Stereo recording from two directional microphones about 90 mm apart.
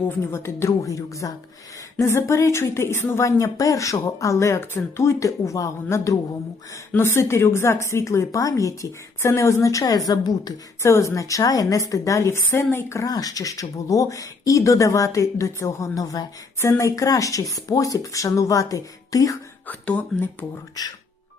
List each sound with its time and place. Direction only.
0.1 s speech: 25° left (ahead or behind); by 10.9 s 45° left (ahead or behind)
10.9 s speech: 35° left (ahead or behind)
19.6 s speech: 15° left (ahead or behind)
20.8 s speech: 45° left (ahead or behind)